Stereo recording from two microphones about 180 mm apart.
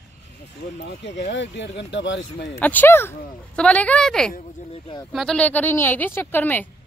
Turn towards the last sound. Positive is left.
turn(degrees=10)  # may be behind; listen again after turning